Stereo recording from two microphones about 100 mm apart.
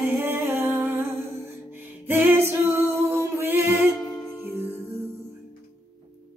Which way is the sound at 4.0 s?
35° left (ahead or behind).